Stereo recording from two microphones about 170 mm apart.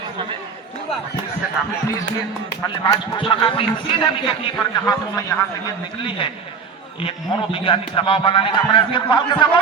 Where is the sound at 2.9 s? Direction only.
30° left (ahead or behind).